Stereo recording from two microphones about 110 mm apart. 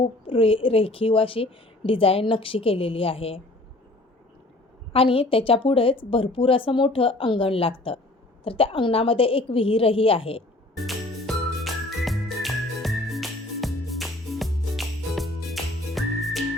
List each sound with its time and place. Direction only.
0.0 s a woman's voice: 55° left (ahead or behind)
4.9 s a woman's voice: 55° left (ahead or behind)
10.8 s music: centre (ahead or behind)